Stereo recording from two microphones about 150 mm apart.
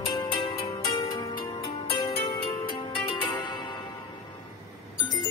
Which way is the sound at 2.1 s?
40° left (ahead or behind).